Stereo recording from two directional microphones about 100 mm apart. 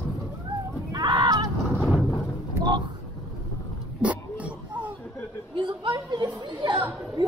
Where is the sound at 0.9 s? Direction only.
50° right (ahead or behind).